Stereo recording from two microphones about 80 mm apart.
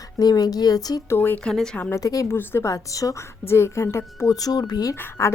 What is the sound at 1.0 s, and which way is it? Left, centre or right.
Speech, left.